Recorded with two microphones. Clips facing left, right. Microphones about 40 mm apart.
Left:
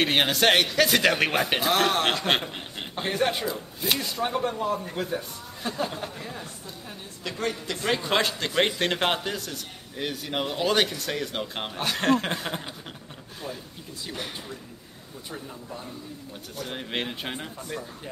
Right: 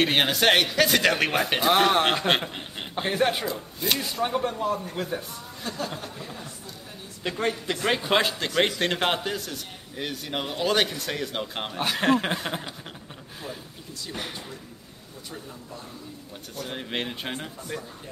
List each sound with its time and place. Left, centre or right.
0.0 s a man's voice: centre
1.7 s a man's voice: centre
2.2 s a man's voice: centre
5.6 s speech: centre
7.2 s a man's voice: right
7.8 s a man's voice: centre
8.5 s a man's voice: centre
16.5 s a man's voice: centre